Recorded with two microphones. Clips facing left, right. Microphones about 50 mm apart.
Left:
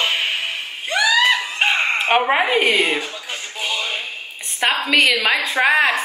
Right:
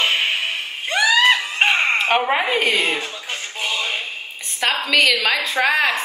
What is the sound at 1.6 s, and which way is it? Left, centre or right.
Chicken, right.